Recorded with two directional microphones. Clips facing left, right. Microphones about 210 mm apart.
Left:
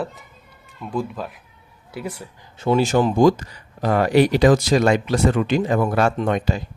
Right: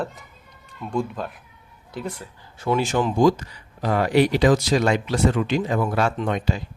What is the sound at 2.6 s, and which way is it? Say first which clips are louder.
Speech: left 4 dB; 30° left (ahead or behind).